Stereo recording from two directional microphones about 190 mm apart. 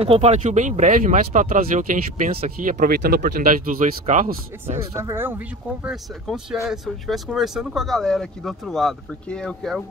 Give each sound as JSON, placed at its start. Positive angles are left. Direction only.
{"t": 0.0, "sound": "speech", "side_deg": -35}
{"t": 4.9, "sound": "speech", "side_deg": -15}